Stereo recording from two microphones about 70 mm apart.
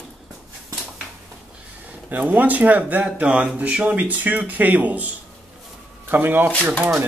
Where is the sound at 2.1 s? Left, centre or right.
Right.